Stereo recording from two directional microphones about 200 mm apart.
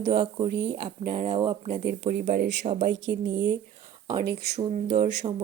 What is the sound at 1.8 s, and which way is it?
Speech, 55° right (ahead or behind).